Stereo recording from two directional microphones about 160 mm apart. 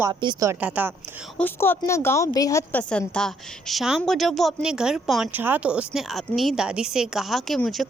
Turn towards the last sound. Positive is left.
turn(degrees=0)  # may be behind; listen again after turning